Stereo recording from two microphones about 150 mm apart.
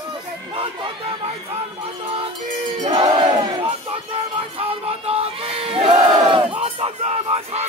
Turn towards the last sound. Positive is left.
turn(degrees=-40)  # may be behind; listen again after turning